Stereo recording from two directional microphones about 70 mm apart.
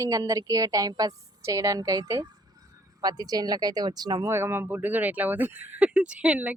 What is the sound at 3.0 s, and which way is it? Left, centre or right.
Speech, right.